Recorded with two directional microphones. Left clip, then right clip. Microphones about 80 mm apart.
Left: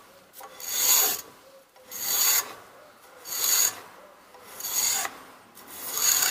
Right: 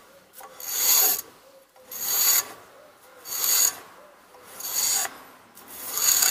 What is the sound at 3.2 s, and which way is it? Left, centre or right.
Pulleys, centre.